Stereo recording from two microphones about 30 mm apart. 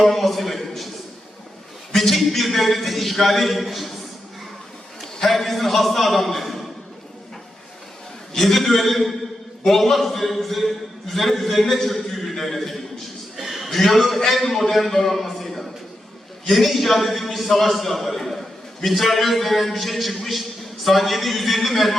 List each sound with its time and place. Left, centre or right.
0.0 s a sound: centre
1.9 s a man's voice: centre
5.2 s a man's voice: centre
8.3 s a man's voice: centre
12.0 s a sound: centre
13.7 s a man's voice: centre